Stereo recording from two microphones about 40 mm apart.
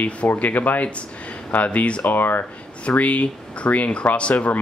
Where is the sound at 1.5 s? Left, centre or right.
Left.